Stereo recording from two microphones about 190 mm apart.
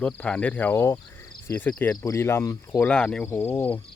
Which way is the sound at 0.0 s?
5° left (ahead or behind).